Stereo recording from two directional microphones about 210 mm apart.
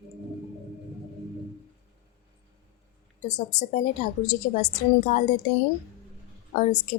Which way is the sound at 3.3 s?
35° left (ahead or behind).